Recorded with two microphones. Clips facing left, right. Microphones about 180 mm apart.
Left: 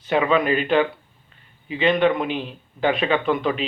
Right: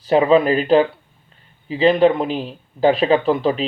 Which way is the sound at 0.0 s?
35° right (ahead or behind).